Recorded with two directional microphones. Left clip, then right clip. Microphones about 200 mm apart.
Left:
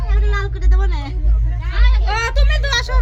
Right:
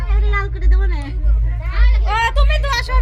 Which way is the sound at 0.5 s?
10° left (ahead or behind).